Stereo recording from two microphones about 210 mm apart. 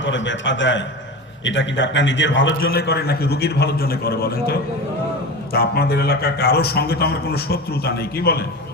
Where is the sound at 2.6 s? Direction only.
45° left (ahead or behind).